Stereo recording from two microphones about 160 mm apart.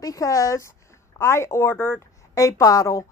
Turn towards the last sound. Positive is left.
turn(degrees=20)  # may be behind; listen again after turning